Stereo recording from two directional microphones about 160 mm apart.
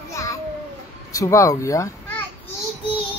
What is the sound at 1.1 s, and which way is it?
A child's voice, 20° left (ahead or behind).